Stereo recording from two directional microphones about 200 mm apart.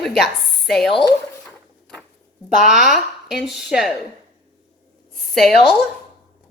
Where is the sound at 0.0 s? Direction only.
Centre (ahead or behind).